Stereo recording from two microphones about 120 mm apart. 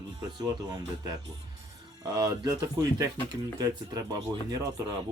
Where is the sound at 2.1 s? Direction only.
35° right (ahead or behind).